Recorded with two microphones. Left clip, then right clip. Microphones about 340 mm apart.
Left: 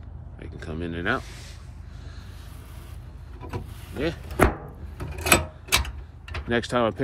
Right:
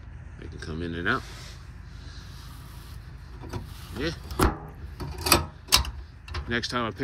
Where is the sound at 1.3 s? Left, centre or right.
Right.